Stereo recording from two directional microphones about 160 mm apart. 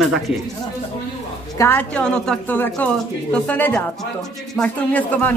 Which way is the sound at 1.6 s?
10° left (ahead or behind).